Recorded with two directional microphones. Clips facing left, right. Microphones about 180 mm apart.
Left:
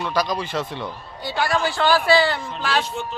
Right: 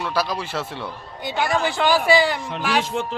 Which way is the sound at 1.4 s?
20° right (ahead or behind).